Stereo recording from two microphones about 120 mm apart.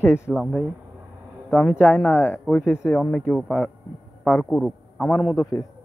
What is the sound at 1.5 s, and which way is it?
Speech, 10° left (ahead or behind).